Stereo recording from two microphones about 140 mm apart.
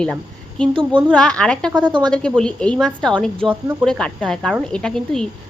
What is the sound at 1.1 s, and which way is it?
Speech, 5° left (ahead or behind).